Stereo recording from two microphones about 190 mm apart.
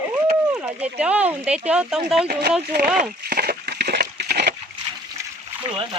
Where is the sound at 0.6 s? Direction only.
5° right (ahead or behind).